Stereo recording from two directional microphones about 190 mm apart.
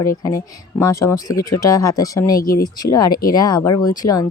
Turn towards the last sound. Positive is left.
turn(degrees=20)  # may be behind; listen again after turning